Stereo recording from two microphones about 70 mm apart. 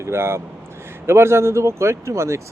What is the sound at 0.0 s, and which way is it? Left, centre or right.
Speech, right.